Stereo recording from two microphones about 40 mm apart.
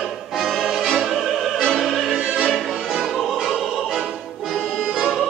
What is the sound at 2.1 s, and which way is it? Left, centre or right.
Music, right.